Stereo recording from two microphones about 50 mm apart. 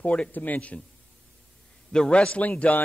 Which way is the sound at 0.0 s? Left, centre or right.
Left.